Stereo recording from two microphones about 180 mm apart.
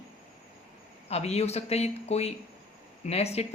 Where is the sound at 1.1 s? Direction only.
35° left (ahead or behind).